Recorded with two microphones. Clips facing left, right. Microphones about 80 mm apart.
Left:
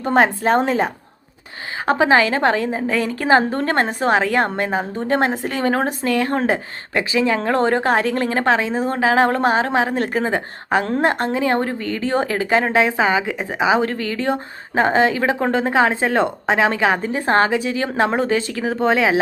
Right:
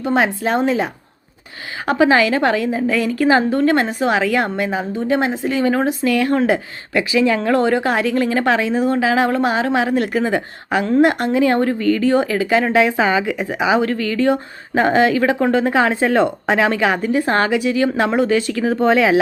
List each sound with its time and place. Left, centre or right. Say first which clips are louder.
0.0 s speech: left 1 dB; left
1.9 s a woman's voice: right 1 dB; left
6.1 s a woman's voice: right 2 dB; left